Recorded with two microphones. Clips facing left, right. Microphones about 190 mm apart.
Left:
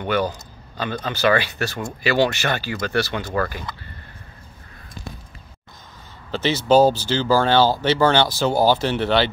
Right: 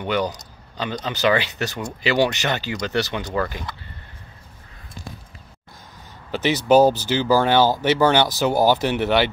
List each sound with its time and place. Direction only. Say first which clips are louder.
0.1 s speech: left 1 dB; 20° right (ahead or behind)
6.3 s speech: even; 15° right (ahead or behind)